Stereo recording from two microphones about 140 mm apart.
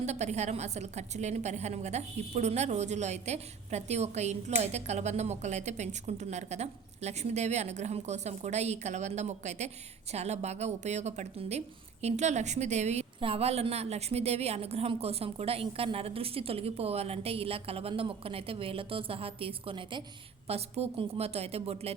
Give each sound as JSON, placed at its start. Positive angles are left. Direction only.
{"t": 0.0, "sound": "a woman's voice", "side_deg": -55}
{"t": 13.1, "sound": "a woman's voice", "side_deg": -40}